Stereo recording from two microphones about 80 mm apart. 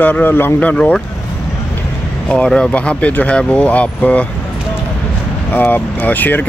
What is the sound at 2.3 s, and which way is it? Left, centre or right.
Speech, centre.